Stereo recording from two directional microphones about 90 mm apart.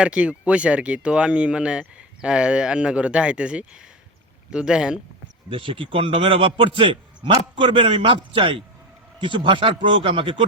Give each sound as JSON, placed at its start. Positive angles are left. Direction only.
{"t": 0.0, "sound": "speech", "side_deg": -15}
{"t": 5.5, "sound": "a man's voice", "side_deg": -75}